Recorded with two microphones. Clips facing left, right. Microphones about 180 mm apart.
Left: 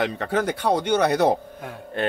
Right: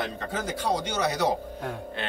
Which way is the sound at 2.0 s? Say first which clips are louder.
Left 12 dB; 45° left (ahead or behind).